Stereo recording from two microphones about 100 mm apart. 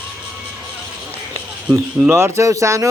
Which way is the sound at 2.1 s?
30° right (ahead or behind).